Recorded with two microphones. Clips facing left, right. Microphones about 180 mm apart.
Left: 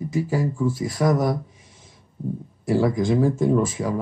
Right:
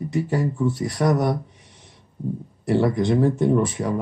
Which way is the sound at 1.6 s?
65° right (ahead or behind).